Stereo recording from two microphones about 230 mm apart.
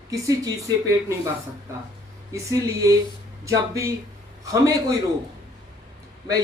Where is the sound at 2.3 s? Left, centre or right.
Centre.